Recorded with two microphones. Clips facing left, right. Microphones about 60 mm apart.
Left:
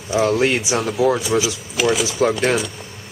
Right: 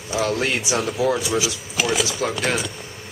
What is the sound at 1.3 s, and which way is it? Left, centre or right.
Speech, left.